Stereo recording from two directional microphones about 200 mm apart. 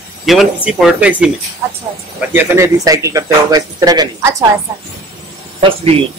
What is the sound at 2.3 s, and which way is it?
Speech, 15° right (ahead or behind).